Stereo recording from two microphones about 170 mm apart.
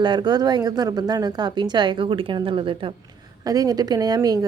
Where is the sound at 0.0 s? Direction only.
25° right (ahead or behind).